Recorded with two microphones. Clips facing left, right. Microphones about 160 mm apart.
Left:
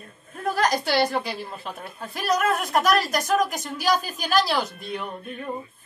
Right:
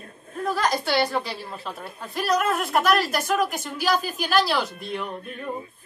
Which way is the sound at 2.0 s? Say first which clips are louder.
Right 1 dB; centre (ahead or behind).